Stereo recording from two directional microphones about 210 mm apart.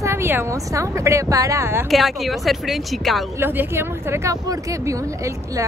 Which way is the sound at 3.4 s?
10° right (ahead or behind).